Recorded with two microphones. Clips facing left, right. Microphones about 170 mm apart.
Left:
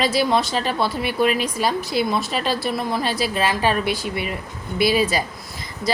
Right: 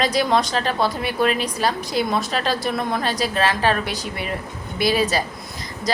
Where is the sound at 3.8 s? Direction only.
40° right (ahead or behind).